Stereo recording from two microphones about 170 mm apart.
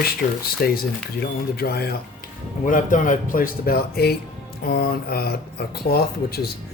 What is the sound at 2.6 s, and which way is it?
Speech, 50° left (ahead or behind).